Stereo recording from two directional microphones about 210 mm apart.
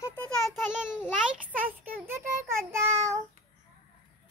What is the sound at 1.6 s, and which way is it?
Child singing, 10° right (ahead or behind).